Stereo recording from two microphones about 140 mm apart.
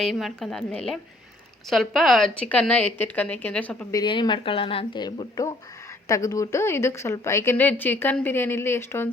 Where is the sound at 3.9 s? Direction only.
30° left (ahead or behind).